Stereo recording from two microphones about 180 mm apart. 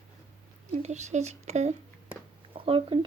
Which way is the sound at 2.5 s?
30° right (ahead or behind).